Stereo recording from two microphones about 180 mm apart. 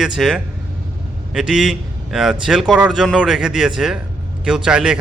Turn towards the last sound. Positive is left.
turn(degrees=-5)  # may be behind; listen again after turning